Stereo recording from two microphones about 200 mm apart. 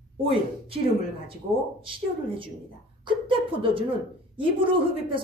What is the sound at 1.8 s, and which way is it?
A woman's voice, 25° right (ahead or behind).